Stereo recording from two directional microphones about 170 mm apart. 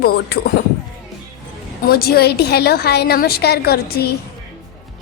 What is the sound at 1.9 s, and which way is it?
A woman's voice, 65° left (ahead or behind).